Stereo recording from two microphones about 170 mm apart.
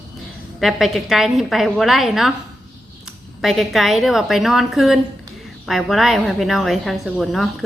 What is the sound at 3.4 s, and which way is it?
A woman's voice, centre (ahead or behind).